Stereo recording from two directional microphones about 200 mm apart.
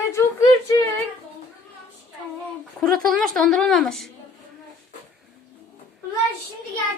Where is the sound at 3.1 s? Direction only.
Centre (ahead or behind).